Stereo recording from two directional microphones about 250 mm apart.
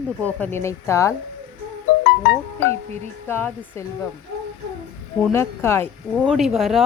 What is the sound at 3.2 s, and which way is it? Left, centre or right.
Speech, centre.